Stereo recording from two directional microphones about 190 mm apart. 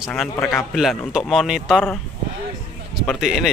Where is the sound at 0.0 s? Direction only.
5° left (ahead or behind).